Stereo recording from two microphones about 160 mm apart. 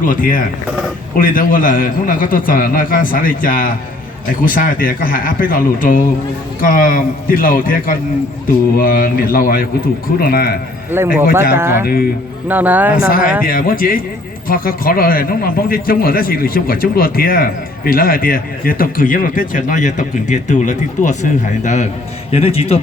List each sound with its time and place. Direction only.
0.0 s a man's voice: 60° left (ahead or behind)
10.9 s speech: 15° right (ahead or behind)
13.1 s a man's voice: 60° left (ahead or behind); by 22.8 s 40° left (ahead or behind)